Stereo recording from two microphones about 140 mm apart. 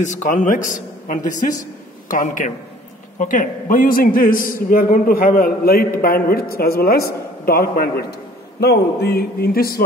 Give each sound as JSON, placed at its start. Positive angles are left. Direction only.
{"t": 0.0, "sound": "a man's voice", "side_deg": 60}
{"t": 9.1, "sound": "a man's voice", "side_deg": 90}